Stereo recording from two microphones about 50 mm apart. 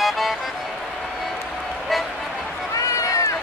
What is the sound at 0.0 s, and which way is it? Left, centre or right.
Music, centre.